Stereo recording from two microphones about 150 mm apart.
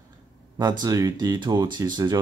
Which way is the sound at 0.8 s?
25° right (ahead or behind).